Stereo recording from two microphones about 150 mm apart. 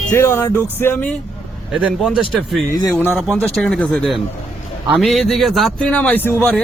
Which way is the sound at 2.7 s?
25° left (ahead or behind).